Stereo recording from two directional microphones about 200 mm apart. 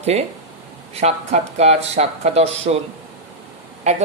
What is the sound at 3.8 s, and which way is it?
Speech, 35° right (ahead or behind).